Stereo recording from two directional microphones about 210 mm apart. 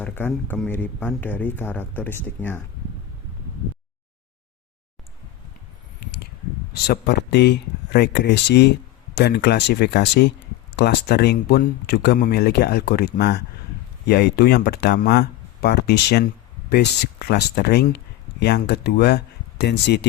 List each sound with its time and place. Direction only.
0.0 s speech: 10° left (ahead or behind)
6.8 s speech: 50° left (ahead or behind)